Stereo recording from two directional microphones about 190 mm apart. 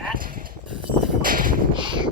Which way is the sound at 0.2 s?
50° right (ahead or behind).